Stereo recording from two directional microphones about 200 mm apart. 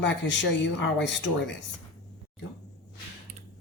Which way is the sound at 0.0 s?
65° left (ahead or behind).